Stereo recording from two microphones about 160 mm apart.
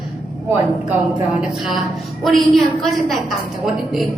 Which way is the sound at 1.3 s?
5° right (ahead or behind).